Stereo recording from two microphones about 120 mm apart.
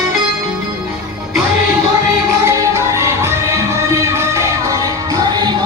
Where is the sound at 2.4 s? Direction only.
25° right (ahead or behind).